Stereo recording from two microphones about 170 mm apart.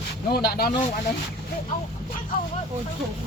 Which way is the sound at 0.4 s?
65° left (ahead or behind).